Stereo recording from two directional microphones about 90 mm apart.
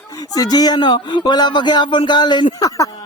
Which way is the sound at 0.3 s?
45° left (ahead or behind).